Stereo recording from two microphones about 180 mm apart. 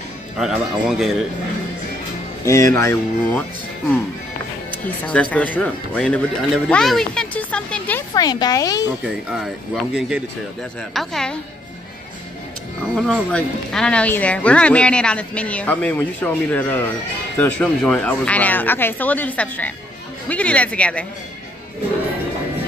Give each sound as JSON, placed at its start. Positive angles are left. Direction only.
{"t": 0.4, "sound": "a man's voice", "side_deg": -5}
{"t": 2.4, "sound": "speech", "side_deg": 15}
{"t": 4.6, "sound": "speech", "side_deg": 10}
{"t": 8.1, "sound": "speech", "side_deg": 20}
{"t": 9.9, "sound": "a man's voice", "side_deg": -5}
{"t": 12.9, "sound": "speech", "side_deg": 0}